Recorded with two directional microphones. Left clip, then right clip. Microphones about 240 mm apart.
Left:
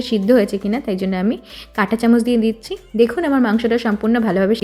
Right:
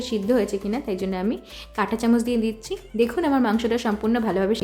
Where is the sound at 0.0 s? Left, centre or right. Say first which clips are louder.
Left 7 dB; centre.